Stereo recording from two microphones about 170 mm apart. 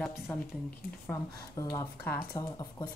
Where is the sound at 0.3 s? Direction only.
10° left (ahead or behind).